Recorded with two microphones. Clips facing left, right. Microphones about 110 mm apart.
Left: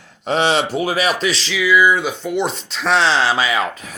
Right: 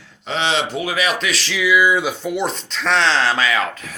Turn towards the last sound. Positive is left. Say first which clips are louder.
# left 1 dB
turn(degrees=20)  # may be behind; listen again after turning